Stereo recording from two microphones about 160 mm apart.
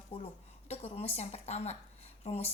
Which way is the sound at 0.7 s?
40° left (ahead or behind).